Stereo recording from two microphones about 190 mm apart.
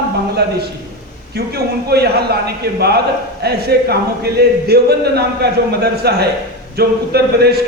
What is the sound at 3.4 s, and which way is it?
Speech, 55° right (ahead or behind).